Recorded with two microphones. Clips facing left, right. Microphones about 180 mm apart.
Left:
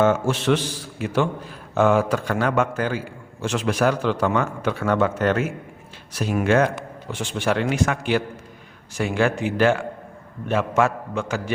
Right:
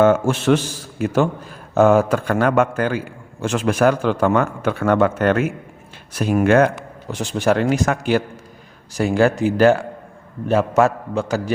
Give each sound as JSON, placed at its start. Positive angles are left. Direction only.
{"t": 0.0, "sound": "a man's voice", "side_deg": -50}
{"t": 7.1, "sound": "a man's voice", "side_deg": -40}